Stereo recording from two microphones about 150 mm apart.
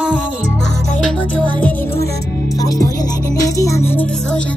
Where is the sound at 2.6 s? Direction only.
25° left (ahead or behind); by 4.4 s 10° left (ahead or behind).